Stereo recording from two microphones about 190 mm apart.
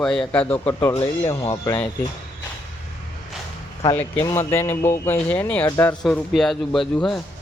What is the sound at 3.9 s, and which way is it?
A man's voice, 10° left (ahead or behind).